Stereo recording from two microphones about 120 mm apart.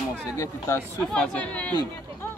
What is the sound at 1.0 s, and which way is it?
Speech, 5° left (ahead or behind).